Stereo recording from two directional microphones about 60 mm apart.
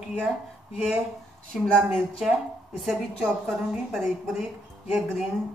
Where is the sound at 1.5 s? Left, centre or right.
Centre.